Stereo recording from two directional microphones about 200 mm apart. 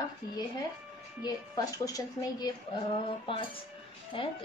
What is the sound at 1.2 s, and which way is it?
A woman's voice, 20° left (ahead or behind).